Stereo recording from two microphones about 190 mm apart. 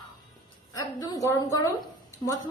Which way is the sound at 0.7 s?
20° left (ahead or behind).